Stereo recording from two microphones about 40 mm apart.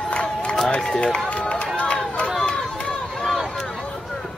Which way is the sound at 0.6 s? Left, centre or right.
Centre.